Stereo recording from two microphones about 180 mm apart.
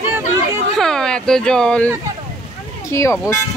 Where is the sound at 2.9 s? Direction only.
15° left (ahead or behind).